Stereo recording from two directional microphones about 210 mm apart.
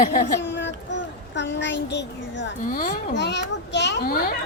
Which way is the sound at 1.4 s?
55° left (ahead or behind).